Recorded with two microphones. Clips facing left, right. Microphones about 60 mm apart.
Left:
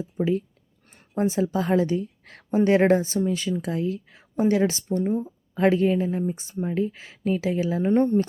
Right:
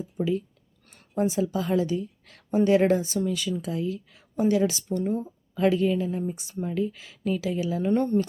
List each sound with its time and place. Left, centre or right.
0.2 s a woman's voice: left
7.9 s speech: left